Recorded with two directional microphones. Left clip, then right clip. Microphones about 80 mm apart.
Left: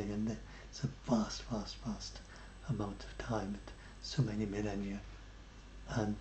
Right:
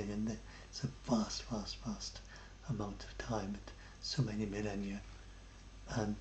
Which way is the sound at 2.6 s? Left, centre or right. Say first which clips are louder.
Left 2 dB; centre.